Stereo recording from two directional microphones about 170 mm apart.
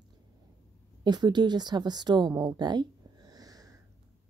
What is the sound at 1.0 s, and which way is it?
A woman's voice, 25° right (ahead or behind).